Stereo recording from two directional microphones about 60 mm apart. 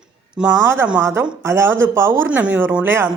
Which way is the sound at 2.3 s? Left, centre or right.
Right.